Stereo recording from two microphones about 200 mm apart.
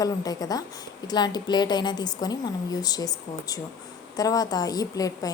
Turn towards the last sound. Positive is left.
turn(degrees=20)  # may be behind; listen again after turning